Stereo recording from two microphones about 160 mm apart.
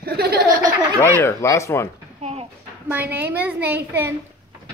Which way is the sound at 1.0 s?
15° left (ahead or behind).